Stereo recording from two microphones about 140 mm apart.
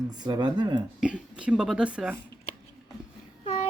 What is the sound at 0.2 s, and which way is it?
Speech, 30° right (ahead or behind).